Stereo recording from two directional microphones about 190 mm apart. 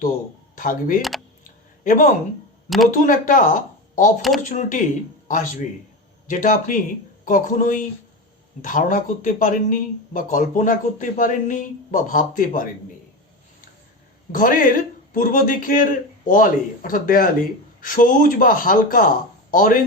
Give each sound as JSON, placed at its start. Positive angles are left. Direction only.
{"t": 0.5, "sound": "speech", "side_deg": 45}
{"t": 2.6, "sound": "speech", "side_deg": 0}
{"t": 2.9, "sound": "speech", "side_deg": 45}
{"t": 6.2, "sound": "speech", "side_deg": 45}
{"t": 14.3, "sound": "speech", "side_deg": 45}